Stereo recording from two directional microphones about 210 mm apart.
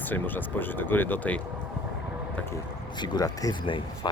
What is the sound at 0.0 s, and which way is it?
Speech, 10° left (ahead or behind).